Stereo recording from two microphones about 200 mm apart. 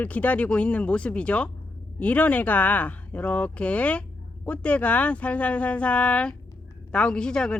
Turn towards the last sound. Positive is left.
turn(degrees=5)  # may be behind; listen again after turning